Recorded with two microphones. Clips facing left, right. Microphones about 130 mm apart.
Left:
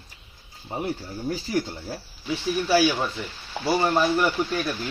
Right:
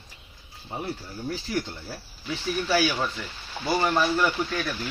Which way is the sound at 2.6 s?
15° left (ahead or behind).